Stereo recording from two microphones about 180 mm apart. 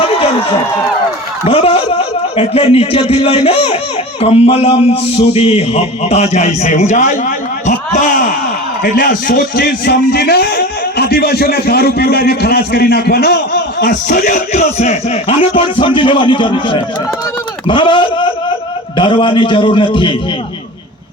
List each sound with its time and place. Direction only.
0.0 s run: 30° left (ahead or behind)
1.5 s a man's voice: 35° left (ahead or behind)